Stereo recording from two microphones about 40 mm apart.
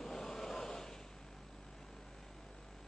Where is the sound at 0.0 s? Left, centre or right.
Centre.